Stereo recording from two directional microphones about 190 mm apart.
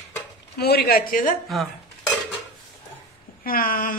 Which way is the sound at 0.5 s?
55° left (ahead or behind).